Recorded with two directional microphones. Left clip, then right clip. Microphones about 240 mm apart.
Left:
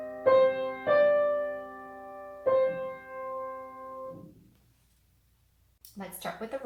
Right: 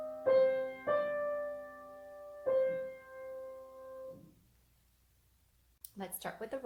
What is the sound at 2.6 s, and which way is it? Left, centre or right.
Music, right.